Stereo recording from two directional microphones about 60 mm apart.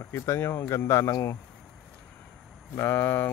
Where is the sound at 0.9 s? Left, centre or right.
Left.